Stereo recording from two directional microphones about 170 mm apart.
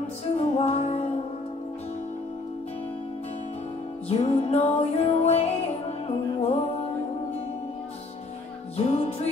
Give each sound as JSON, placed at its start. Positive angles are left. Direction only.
{"t": 0.4, "sound": "music", "side_deg": 40}
{"t": 4.1, "sound": "music", "side_deg": 35}
{"t": 8.7, "sound": "music", "side_deg": 40}